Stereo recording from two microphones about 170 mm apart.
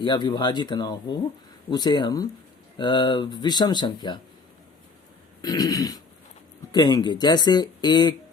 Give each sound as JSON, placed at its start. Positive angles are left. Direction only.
{"t": 0.0, "sound": "speech", "side_deg": 25}
{"t": 5.4, "sound": "speech", "side_deg": 25}